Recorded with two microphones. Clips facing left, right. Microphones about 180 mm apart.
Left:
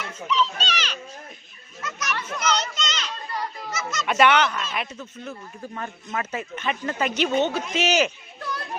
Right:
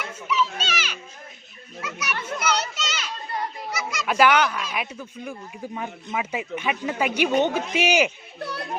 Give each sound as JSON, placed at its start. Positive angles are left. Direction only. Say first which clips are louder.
{"t": 0.3, "sound": "children playing", "louder": "left 1 dB", "side_deg": -10}
{"t": 3.7, "sound": "honk", "louder": "even", "side_deg": -10}
{"t": 4.1, "sound": "speech", "louder": "even", "side_deg": -5}